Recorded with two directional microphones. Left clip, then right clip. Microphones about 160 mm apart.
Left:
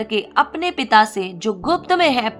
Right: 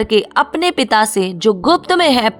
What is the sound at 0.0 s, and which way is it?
A woman's voice, 40° right (ahead or behind).